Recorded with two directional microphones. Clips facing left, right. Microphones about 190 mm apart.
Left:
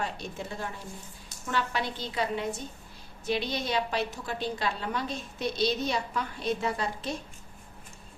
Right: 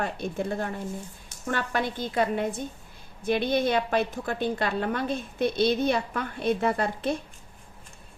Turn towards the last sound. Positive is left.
turn(degrees=-55)  # may be behind; listen again after turning